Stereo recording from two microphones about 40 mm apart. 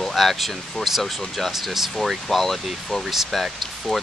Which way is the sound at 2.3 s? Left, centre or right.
Centre.